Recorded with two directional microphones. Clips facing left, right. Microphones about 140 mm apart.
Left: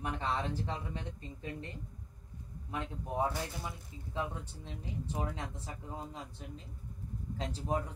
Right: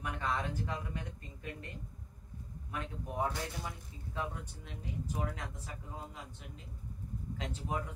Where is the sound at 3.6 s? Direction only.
25° left (ahead or behind).